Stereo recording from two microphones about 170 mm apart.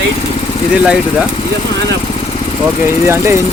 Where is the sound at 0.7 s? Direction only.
5° right (ahead or behind).